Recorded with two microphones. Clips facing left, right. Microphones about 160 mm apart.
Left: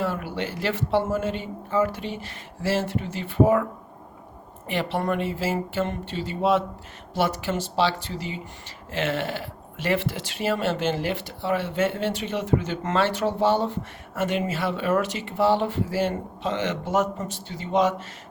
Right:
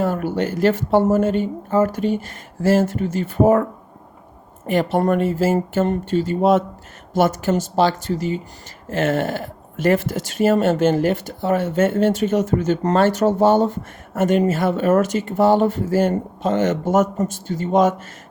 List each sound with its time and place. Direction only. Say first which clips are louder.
0.0 s speech: right 7 dB; 45° right (ahead or behind)